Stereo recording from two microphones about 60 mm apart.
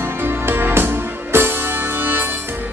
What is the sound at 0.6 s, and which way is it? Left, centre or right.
Music, right.